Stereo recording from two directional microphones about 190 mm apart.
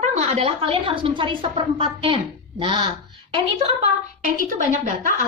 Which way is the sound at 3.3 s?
35° right (ahead or behind).